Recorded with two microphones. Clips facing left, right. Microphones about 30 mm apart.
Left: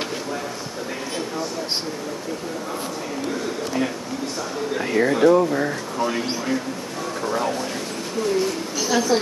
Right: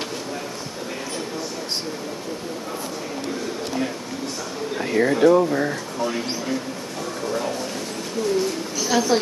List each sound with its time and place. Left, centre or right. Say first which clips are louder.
4.7 s speech: even; centre
6.0 s speech: left 1 dB; centre
8.7 s a woman's voice: even; centre